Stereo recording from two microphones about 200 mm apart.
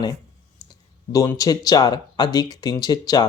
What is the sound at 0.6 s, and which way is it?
Speech, 20° left (ahead or behind).